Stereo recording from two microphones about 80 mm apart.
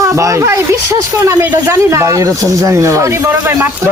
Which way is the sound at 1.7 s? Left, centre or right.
Right.